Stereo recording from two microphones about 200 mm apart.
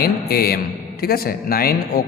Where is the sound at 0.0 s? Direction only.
50° left (ahead or behind).